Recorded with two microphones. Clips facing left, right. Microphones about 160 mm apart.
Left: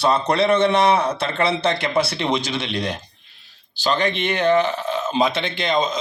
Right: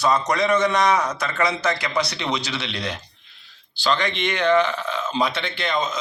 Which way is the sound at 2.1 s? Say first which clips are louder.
Left 4 dB; 55° left (ahead or behind).